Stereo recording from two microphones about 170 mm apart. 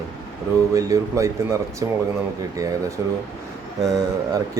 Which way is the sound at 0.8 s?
20° right (ahead or behind).